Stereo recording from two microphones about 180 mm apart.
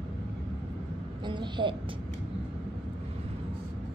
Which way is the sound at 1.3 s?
25° right (ahead or behind).